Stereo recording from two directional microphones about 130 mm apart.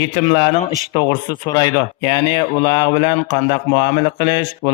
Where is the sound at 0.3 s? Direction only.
50° left (ahead or behind).